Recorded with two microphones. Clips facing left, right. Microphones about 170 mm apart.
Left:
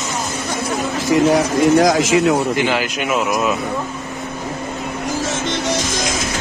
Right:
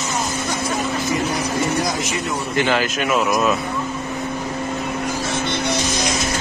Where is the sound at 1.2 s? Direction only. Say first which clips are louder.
Left 8 dB; 90° left.